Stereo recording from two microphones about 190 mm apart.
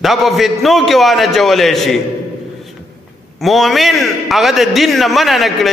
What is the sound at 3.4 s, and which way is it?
A man's voice, centre (ahead or behind).